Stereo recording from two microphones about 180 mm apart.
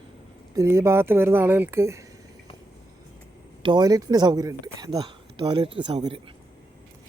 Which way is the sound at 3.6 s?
25° right (ahead or behind).